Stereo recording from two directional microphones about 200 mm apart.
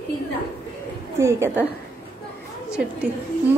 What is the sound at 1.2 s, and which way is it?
Speech, 10° right (ahead or behind).